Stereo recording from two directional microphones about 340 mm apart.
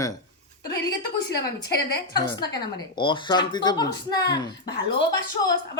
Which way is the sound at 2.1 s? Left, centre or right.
Centre.